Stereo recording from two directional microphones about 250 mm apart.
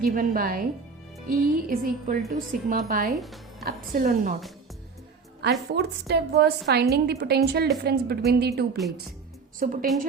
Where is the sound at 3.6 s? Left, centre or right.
Right.